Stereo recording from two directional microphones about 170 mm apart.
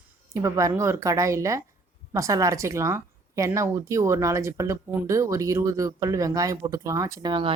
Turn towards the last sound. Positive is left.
turn(degrees=-25)  # may be behind; listen again after turning